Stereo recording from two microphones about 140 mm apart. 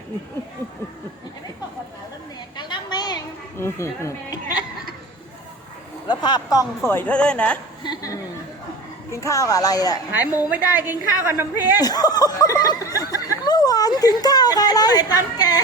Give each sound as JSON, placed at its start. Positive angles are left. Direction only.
{"t": 2.6, "sound": "a sound", "side_deg": 30}
{"t": 3.6, "sound": "a woman's voice", "side_deg": 20}
{"t": 6.1, "sound": "speech", "side_deg": 30}
{"t": 6.8, "sound": "a woman's voice", "side_deg": 15}
{"t": 7.9, "sound": "a woman's voice", "side_deg": 25}
{"t": 10.1, "sound": "a woman's voice", "side_deg": -15}
{"t": 11.8, "sound": "speech", "side_deg": 25}